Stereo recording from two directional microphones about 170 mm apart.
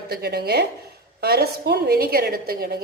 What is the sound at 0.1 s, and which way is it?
A woman's voice, 70° right (ahead or behind).